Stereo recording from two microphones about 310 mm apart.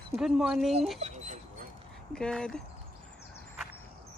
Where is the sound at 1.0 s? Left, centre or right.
Right.